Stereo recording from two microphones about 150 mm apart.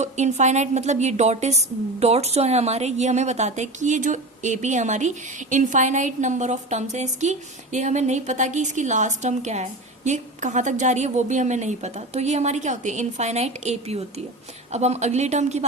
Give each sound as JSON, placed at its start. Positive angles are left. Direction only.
{"t": 0.0, "sound": "a woman's voice", "side_deg": -50}